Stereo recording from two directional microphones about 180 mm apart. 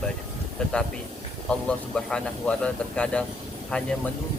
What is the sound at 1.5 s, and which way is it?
A man's voice, 5° left (ahead or behind).